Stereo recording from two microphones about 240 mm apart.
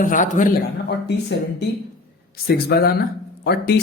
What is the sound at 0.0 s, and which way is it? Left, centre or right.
Speech, left.